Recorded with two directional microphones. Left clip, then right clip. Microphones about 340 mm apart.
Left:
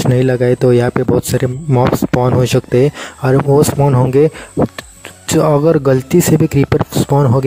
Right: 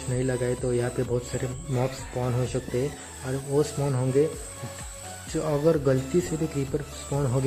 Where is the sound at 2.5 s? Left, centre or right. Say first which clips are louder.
Left 17 dB; left.